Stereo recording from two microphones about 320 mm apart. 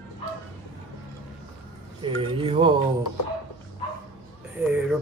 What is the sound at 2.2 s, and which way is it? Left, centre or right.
Speech, centre.